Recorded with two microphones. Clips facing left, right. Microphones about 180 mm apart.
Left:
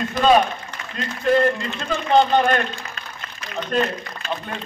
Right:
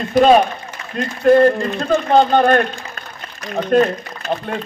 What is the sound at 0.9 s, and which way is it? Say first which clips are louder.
A man's voice: right 7 dB; 45° right (ahead or behind).